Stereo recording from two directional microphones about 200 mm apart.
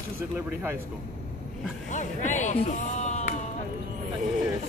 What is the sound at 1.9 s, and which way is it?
Speech, 40° left (ahead or behind).